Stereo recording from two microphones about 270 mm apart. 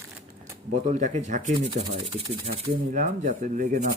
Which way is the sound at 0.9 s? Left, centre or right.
Right.